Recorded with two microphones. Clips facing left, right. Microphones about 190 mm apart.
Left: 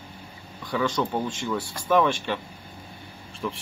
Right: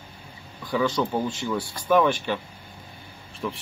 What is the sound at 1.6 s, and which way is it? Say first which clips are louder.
Speech: left 1 dB; 25° left (ahead or behind).